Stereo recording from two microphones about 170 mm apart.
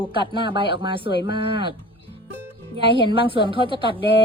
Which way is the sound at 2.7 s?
30° right (ahead or behind).